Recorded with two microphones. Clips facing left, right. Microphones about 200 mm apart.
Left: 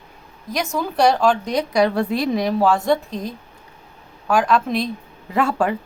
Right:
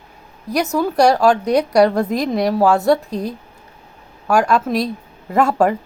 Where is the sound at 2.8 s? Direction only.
10° right (ahead or behind).